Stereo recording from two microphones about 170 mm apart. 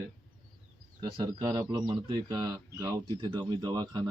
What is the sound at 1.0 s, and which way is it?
A man's voice, 25° right (ahead or behind).